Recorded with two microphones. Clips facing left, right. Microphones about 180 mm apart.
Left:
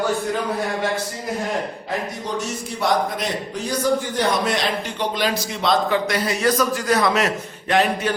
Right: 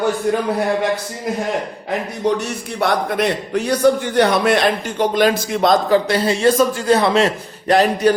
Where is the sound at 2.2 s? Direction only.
65° right (ahead or behind); by 6.0 s 45° right (ahead or behind).